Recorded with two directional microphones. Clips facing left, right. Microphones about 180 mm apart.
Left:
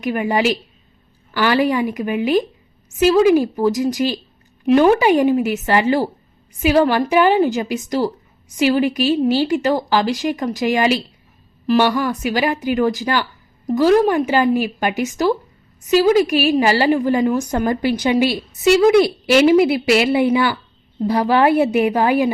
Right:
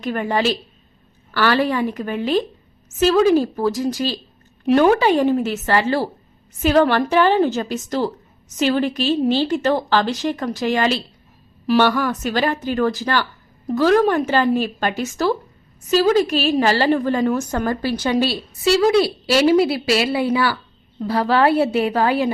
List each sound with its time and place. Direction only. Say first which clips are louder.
0.0 s a woman's voice: left 2 dB; 10° left (ahead or behind)